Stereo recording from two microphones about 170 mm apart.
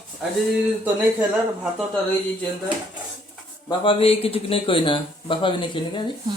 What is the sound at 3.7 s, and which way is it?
Speech, 35° left (ahead or behind).